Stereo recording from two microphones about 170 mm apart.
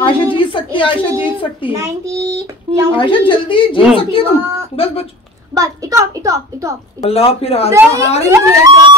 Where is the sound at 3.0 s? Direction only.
30° left (ahead or behind).